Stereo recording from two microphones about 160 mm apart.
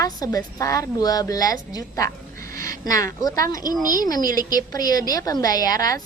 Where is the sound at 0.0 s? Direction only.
20° left (ahead or behind).